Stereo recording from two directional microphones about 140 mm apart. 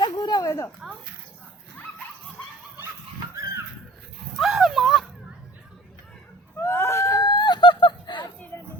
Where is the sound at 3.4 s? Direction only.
25° right (ahead or behind).